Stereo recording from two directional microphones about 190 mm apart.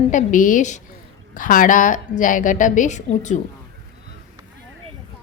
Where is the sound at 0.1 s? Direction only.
40° left (ahead or behind).